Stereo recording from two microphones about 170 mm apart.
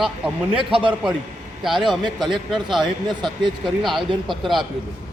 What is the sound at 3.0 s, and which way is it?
Speech, 25° right (ahead or behind).